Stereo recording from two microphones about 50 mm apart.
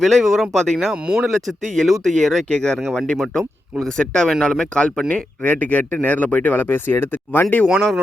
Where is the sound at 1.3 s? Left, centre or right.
Centre.